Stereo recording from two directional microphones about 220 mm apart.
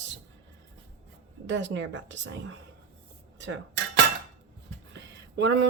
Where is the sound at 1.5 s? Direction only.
55° right (ahead or behind).